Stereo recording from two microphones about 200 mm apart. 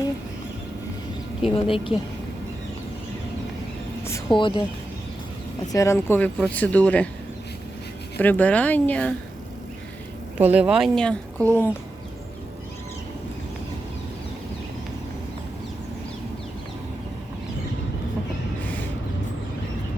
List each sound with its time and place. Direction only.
1.5 s a woman's voice: 25° left (ahead or behind)
4.4 s a woman's voice: 25° left (ahead or behind)
5.7 s speech: 15° left (ahead or behind)
8.2 s speech: 10° left (ahead or behind)
10.3 s speech: 10° right (ahead or behind)